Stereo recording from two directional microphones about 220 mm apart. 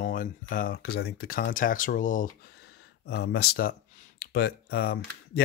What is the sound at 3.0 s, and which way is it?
Speech, 50° left (ahead or behind).